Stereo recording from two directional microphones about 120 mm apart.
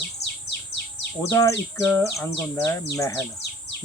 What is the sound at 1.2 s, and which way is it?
Speech, 25° left (ahead or behind).